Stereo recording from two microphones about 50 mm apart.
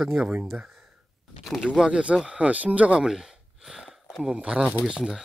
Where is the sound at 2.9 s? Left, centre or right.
Centre.